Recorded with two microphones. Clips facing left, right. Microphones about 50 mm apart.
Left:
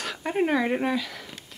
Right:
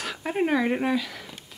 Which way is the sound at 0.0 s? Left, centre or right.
Centre.